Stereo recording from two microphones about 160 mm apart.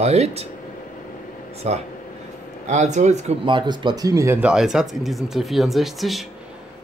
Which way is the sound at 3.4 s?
30° right (ahead or behind).